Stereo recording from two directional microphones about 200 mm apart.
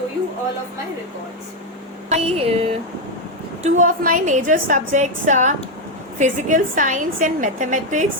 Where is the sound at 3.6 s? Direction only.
40° right (ahead or behind).